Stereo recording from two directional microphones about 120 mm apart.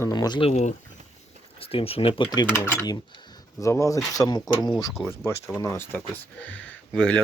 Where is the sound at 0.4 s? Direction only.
65° left (ahead or behind).